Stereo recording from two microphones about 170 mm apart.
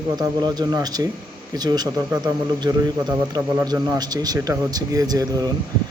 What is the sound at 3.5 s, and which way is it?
A man's voice, 20° right (ahead or behind).